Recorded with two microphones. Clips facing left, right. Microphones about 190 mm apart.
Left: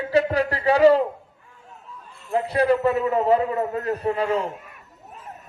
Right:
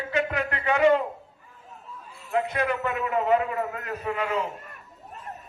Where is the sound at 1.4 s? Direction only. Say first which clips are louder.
Even; centre (ahead or behind).